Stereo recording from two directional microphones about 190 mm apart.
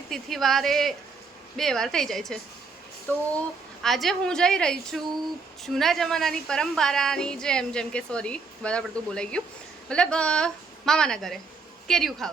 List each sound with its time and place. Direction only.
0.1 s a woman's voice: centre (ahead or behind)
3.8 s a woman's voice: centre (ahead or behind)